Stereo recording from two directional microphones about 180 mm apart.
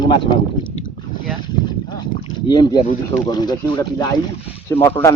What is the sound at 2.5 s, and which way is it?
A man's voice, 25° left (ahead or behind).